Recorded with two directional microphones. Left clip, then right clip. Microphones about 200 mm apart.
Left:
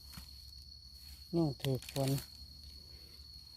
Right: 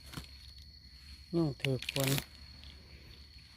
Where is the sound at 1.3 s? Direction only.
Centre (ahead or behind).